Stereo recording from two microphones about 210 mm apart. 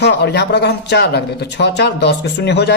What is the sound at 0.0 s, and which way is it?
Speech, 55° left (ahead or behind).